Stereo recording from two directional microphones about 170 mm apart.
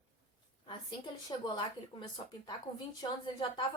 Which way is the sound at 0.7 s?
25° left (ahead or behind).